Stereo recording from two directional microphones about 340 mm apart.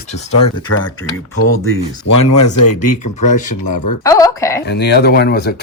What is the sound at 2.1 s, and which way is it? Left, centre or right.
Speech, left.